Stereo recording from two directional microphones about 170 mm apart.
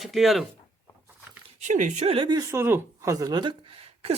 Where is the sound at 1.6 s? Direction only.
45° right (ahead or behind).